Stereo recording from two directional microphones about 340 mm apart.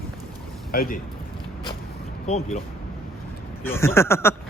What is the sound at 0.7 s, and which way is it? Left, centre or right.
Speech, left.